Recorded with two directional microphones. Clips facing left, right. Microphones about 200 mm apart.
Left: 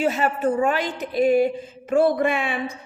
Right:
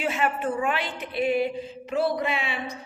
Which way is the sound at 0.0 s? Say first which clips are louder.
Left 5 dB; 40° left (ahead or behind).